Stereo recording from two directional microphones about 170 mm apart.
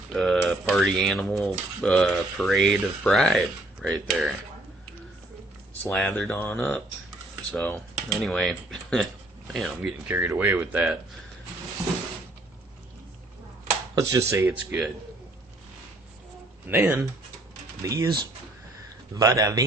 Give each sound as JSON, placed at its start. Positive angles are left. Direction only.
{"t": 0.1, "sound": "speech", "side_deg": 0}
{"t": 5.8, "sound": "speech", "side_deg": 5}
{"t": 13.9, "sound": "speech", "side_deg": -20}
{"t": 16.6, "sound": "speech", "side_deg": -10}
{"t": 19.1, "sound": "speech", "side_deg": -20}